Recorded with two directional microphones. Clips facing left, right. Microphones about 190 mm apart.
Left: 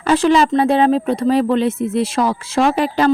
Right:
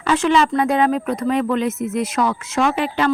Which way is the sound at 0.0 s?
35° left (ahead or behind).